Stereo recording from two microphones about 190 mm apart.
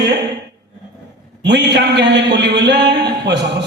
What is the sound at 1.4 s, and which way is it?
A man's voice, 65° right (ahead or behind).